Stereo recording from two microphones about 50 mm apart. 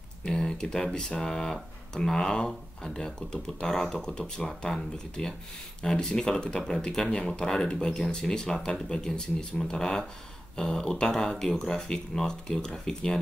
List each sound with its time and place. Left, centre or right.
0.2 s speech: centre